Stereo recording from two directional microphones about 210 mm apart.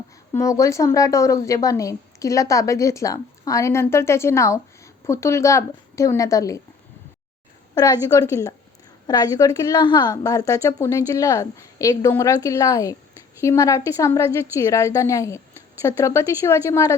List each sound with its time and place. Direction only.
0.3 s a woman's voice: 15° left (ahead or behind)
7.8 s a woman's voice: 20° left (ahead or behind)